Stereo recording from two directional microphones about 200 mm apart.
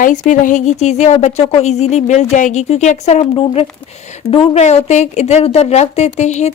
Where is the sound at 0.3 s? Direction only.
40° left (ahead or behind).